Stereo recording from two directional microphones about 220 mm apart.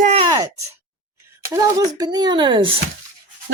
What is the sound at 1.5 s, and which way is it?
Speech, 15° right (ahead or behind).